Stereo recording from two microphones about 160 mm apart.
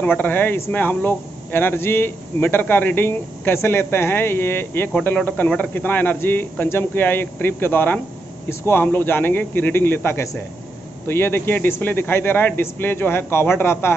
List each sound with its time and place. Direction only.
0.0 s speech: 10° left (ahead or behind)